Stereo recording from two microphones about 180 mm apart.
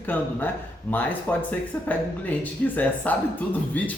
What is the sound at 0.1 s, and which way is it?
Speech, 10° left (ahead or behind).